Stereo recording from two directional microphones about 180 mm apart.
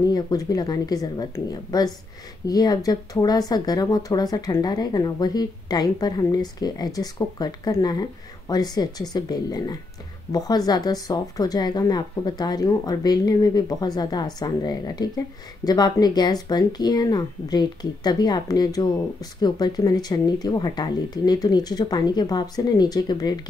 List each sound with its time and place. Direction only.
0.0 s a woman's voice: 20° left (ahead or behind)